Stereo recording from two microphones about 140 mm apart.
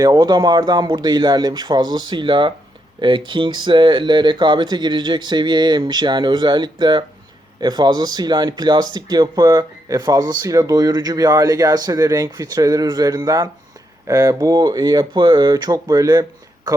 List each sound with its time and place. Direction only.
0.0 s speech: 30° right (ahead or behind)